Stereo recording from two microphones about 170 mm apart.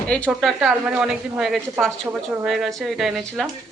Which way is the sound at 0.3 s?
5° right (ahead or behind).